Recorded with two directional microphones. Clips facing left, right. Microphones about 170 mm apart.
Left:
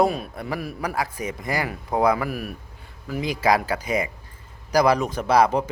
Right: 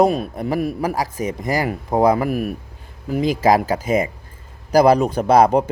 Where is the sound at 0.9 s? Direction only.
40° right (ahead or behind).